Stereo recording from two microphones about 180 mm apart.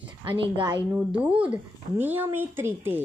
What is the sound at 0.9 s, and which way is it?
Speech, 10° right (ahead or behind).